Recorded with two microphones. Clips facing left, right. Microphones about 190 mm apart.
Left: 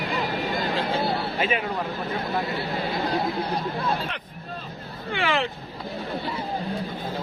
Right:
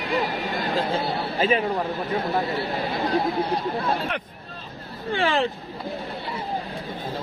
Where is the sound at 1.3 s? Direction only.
30° right (ahead or behind).